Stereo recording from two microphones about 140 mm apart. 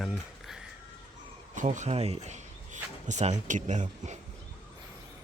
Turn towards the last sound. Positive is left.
turn(degrees=-60)  # may be behind; listen again after turning